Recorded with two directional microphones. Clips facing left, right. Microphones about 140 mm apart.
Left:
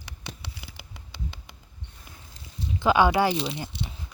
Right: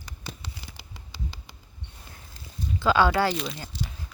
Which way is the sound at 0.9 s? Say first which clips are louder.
Even; 55° left (ahead or behind).